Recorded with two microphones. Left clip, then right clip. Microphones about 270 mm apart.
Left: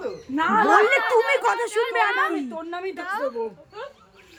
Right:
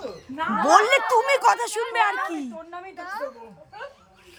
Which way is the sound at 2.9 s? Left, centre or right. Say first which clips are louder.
Left 3 dB; centre.